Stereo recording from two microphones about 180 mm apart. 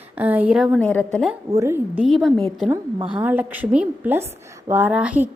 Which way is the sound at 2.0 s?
Centre (ahead or behind).